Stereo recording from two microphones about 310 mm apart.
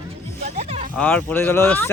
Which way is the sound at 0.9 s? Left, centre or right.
Centre.